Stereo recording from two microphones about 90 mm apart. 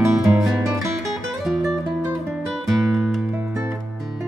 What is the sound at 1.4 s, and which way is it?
Music, 5° right (ahead or behind).